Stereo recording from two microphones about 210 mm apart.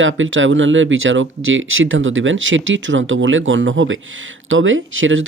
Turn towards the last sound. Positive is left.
turn(degrees=-70)  # may be behind; listen again after turning